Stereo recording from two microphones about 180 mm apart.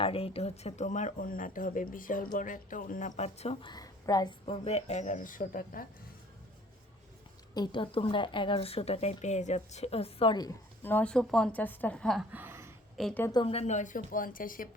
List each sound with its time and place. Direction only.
0.0 s speech: 30° left (ahead or behind); by 5.8 s 50° left (ahead or behind)
7.5 s speech: 25° left (ahead or behind)
10.8 s a woman's voice: 10° left (ahead or behind)
12.3 s a sound: 10° right (ahead or behind)
13.0 s a woman's voice: 5° left (ahead or behind)
13.4 s speech: 35° left (ahead or behind); by 14.7 s 50° left (ahead or behind)